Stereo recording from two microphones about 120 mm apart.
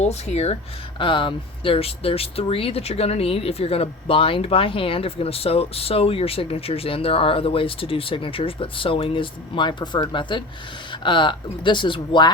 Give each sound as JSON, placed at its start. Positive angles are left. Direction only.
{"t": 0.0, "sound": "speech", "side_deg": 65}
{"t": 0.9, "sound": "speech", "side_deg": 45}